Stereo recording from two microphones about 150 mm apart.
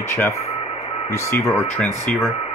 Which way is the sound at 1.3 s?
15° left (ahead or behind).